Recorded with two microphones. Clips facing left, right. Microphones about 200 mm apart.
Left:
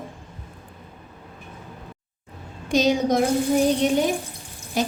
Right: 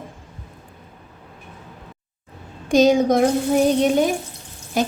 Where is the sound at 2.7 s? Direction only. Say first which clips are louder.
Right 5 dB; 50° right (ahead or behind).